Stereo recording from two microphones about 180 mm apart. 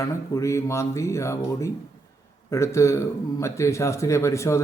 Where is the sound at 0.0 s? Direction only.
15° left (ahead or behind).